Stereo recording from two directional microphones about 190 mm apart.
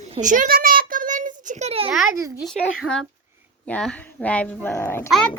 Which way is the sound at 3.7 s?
5° left (ahead or behind).